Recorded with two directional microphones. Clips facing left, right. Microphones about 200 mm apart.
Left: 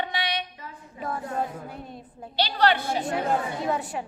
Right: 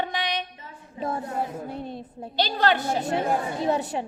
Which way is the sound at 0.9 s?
25° right (ahead or behind).